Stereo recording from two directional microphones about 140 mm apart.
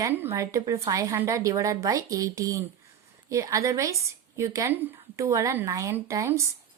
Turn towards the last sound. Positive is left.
turn(degrees=-20)  # may be behind; listen again after turning